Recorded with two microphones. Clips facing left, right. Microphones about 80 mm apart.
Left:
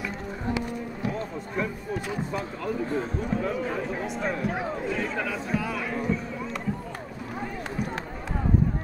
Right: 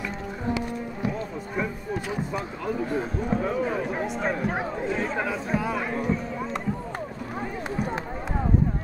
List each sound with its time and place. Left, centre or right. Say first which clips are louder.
2.3 s speech: right 1 dB; centre
3.9 s speech: right 2 dB; right
5.9 s a sound: right 2 dB; right